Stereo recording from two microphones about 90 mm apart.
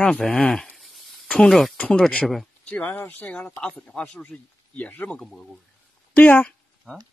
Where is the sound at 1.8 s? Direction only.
10° left (ahead or behind).